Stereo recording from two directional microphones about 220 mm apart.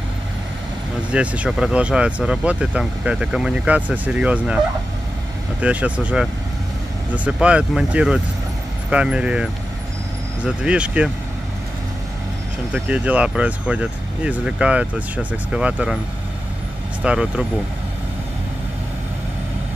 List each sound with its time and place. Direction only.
1.1 s speech: 5° right (ahead or behind)
5.6 s speech: 5° right (ahead or behind)
7.2 s speech: 5° right (ahead or behind)
12.7 s speech: 5° right (ahead or behind)
17.0 s speech: 5° right (ahead or behind)